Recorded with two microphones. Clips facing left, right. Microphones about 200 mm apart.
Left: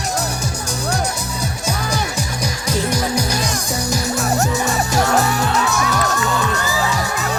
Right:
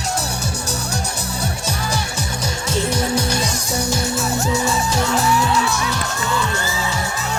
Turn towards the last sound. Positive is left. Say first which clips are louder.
# left 1 dB
turn(degrees=55)  # may be behind; listen again after turning